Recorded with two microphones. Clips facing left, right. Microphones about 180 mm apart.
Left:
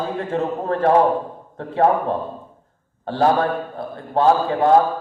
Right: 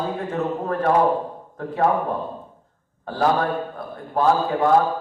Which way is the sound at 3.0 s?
30° left (ahead or behind).